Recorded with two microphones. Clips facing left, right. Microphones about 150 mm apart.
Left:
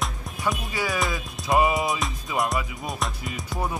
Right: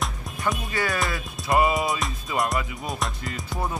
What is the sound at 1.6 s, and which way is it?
Music, 20° left (ahead or behind).